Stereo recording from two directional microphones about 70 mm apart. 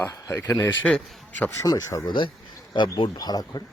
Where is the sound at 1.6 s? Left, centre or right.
Left.